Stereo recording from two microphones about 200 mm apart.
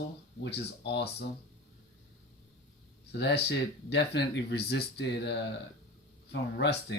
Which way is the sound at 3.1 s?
55° left (ahead or behind).